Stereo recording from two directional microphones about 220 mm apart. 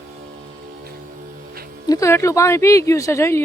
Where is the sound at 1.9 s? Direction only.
15° left (ahead or behind).